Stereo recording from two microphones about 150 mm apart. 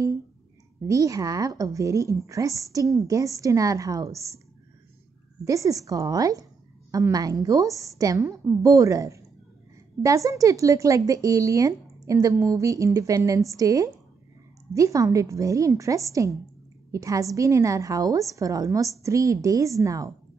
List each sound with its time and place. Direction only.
0.8 s speech: 20° right (ahead or behind)
5.4 s speech: 20° right (ahead or behind)